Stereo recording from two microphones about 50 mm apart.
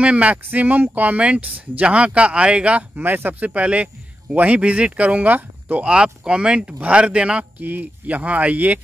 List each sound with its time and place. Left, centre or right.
0.0 s a man's voice: right
0.5 s a man's voice: right
3.0 s a man's voice: right
5.9 s a man's voice: centre
7.6 s speech: right